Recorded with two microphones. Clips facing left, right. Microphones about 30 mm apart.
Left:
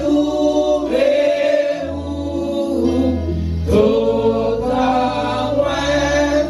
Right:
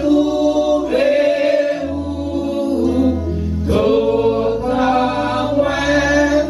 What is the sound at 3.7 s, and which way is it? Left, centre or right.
Choir, centre.